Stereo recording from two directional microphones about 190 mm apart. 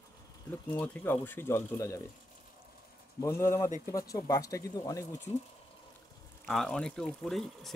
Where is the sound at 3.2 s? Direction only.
15° left (ahead or behind).